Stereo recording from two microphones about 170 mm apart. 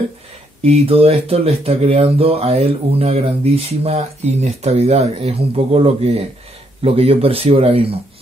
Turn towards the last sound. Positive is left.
turn(degrees=-35)  # may be behind; listen again after turning